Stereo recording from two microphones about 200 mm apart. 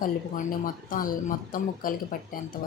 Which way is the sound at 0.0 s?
45° left (ahead or behind).